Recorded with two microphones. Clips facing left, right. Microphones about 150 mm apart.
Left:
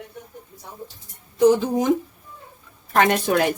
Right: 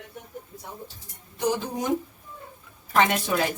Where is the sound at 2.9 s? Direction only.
55° left (ahead or behind).